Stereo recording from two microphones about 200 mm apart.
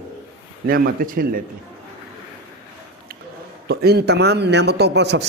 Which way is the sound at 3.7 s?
50° right (ahead or behind).